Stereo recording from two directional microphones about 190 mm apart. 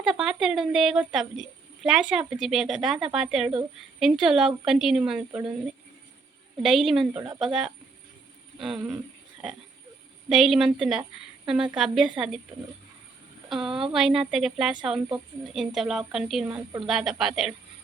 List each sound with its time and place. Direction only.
0.0 s a woman's voice: centre (ahead or behind)
6.6 s a woman's voice: centre (ahead or behind)
7.1 s speech: 25° right (ahead or behind)
7.3 s a woman's voice: centre (ahead or behind)
10.2 s a woman's voice: centre (ahead or behind)
13.5 s a woman's voice: centre (ahead or behind)